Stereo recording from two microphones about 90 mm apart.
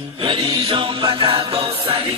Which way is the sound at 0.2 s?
80° right.